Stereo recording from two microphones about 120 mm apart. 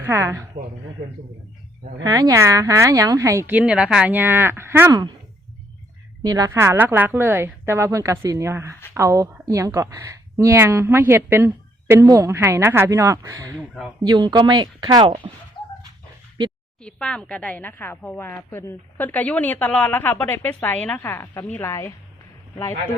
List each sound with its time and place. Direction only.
0.0 s speech: 20° right (ahead or behind)
2.0 s speech: 30° right (ahead or behind)
3.5 s speech: 10° right (ahead or behind)
4.9 s speech: 30° right (ahead or behind)
6.2 s speech: 30° right (ahead or behind)
6.5 s speech: 20° right (ahead or behind); by 15.3 s 40° right (ahead or behind)
16.8 s a woman's voice: 10° left (ahead or behind)